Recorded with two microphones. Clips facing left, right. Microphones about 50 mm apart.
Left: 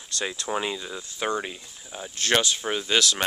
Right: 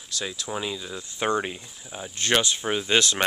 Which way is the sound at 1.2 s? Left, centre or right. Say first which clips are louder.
Right 3 dB; centre.